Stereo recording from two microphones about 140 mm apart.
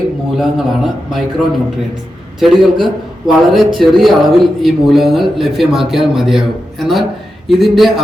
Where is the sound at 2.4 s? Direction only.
Centre (ahead or behind).